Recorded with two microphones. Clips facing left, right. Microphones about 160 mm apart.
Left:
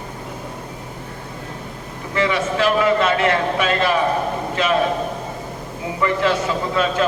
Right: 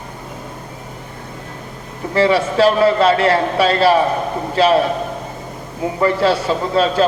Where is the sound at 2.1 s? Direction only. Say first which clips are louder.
Right 6 dB; 35° right (ahead or behind).